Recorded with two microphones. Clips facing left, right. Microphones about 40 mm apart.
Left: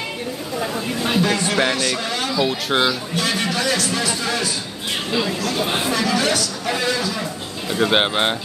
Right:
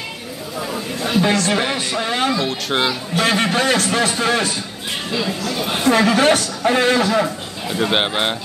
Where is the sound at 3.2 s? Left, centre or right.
Right.